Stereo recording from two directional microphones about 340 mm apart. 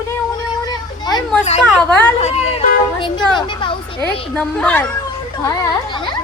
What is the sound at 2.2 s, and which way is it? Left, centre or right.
A woman's voice, centre.